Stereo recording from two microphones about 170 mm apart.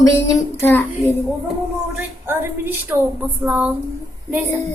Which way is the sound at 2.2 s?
10° right (ahead or behind).